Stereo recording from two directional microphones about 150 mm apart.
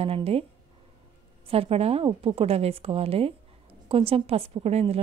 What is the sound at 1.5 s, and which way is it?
Speech, 40° right (ahead or behind).